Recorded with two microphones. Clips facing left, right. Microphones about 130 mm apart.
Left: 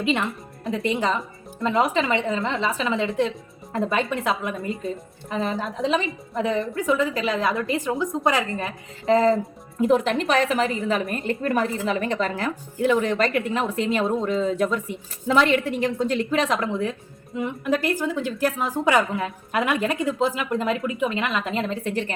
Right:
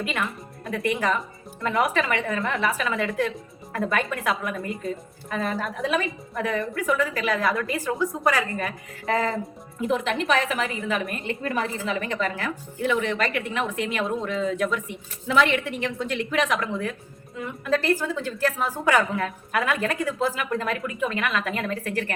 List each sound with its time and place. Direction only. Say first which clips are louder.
0.0 s a woman's voice: left 5 dB; 25° left (ahead or behind)
9.8 s a woman's voice: left 4 dB; 40° left (ahead or behind)
17.3 s a woman's voice: left 2 dB; 15° left (ahead or behind)